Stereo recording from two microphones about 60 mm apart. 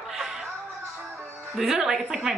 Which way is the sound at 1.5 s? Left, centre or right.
Centre.